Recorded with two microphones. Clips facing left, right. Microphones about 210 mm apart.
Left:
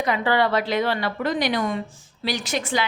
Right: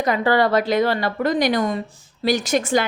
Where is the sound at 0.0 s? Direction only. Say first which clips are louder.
Right 3 dB; 45° right (ahead or behind).